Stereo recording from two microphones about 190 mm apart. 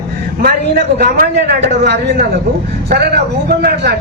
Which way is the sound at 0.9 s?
55° right (ahead or behind).